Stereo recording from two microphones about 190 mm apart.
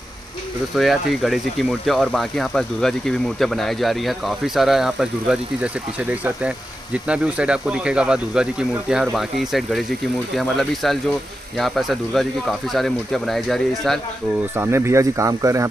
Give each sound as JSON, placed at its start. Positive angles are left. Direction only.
{"t": 0.7, "sound": "speech", "side_deg": 0}
{"t": 14.5, "sound": "speech", "side_deg": -10}